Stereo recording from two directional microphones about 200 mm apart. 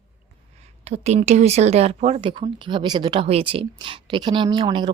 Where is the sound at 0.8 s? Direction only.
35° right (ahead or behind).